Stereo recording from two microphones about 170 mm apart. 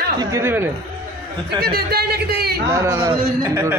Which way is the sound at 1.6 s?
65° right (ahead or behind).